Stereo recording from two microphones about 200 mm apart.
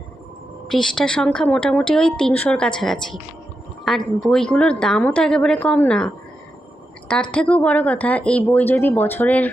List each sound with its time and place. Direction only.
0.7 s a woman's voice: 5° left (ahead or behind)
7.1 s speech: 5° left (ahead or behind)